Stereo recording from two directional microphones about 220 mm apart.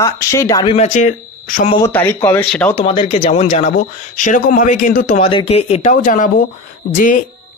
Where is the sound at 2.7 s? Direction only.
25° left (ahead or behind).